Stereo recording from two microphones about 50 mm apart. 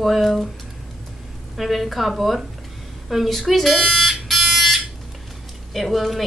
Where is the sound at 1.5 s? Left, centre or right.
Centre.